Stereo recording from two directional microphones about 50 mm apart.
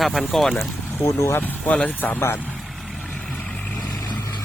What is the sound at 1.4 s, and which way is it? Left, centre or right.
Speech, left.